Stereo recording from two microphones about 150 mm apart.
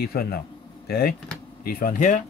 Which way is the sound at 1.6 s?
75° left (ahead or behind).